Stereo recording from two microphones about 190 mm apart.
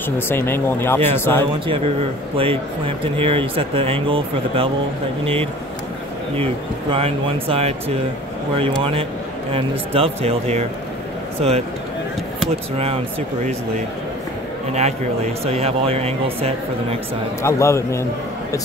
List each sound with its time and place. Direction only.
0.3 s speech: 10° left (ahead or behind)
1.7 s speech: 30° right (ahead or behind)
9.5 s speech: 30° right (ahead or behind)
12.4 s speech: 30° right (ahead or behind)
14.7 s speech: 35° right (ahead or behind)
17.4 s speech: 15° left (ahead or behind)